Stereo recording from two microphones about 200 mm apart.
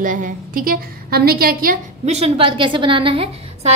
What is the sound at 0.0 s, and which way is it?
A woman's voice, 40° right (ahead or behind).